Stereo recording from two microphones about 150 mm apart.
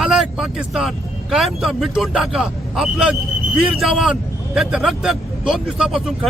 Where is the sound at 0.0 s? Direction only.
5° right (ahead or behind).